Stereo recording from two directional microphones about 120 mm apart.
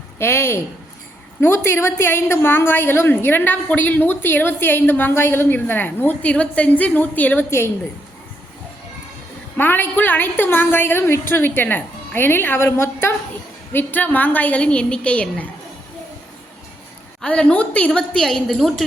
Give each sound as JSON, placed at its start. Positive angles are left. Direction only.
{"t": 0.2, "sound": "a woman's voice", "side_deg": 20}
{"t": 9.6, "sound": "a woman's voice", "side_deg": 15}
{"t": 17.2, "sound": "a woman's voice", "side_deg": 10}